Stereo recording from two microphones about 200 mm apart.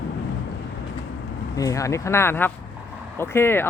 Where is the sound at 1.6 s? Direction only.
15° left (ahead or behind).